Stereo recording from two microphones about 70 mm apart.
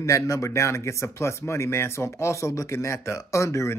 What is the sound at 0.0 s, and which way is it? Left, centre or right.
Speech, left.